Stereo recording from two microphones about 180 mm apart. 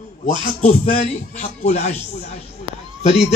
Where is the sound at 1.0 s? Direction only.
40° left (ahead or behind).